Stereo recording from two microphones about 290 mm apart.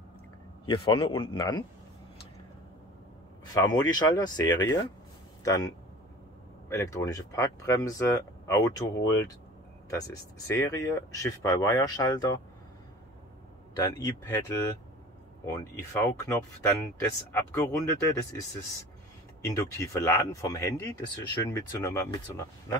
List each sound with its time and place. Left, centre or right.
0.7 s speech: centre
3.5 s speech: centre
6.7 s speech: centre
14.0 s speech: centre
19.4 s speech: centre